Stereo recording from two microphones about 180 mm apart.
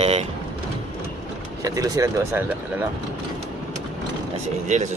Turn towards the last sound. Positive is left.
turn(degrees=-40)  # may be behind; listen again after turning